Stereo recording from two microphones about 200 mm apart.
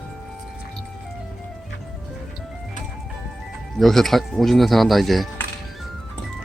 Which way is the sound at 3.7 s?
Centre (ahead or behind).